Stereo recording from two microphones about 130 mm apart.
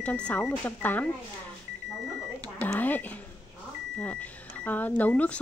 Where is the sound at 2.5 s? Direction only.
15° left (ahead or behind).